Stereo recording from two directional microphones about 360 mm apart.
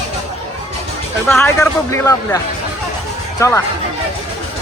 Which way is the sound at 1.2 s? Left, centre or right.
Centre.